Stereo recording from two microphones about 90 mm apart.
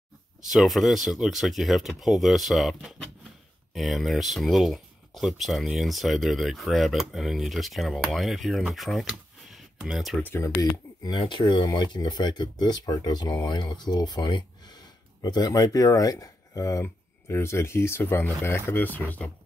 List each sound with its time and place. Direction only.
0.5 s speech: centre (ahead or behind)
9.0 s computer keyboard: centre (ahead or behind)
10.2 s speech: 25° left (ahead or behind)
10.6 s speech: 45° left (ahead or behind)
11.1 s speech: 60° left (ahead or behind); by 19.3 s 20° left (ahead or behind)